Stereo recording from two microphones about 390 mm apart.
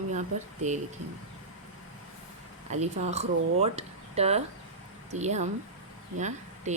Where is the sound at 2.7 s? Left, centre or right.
Centre.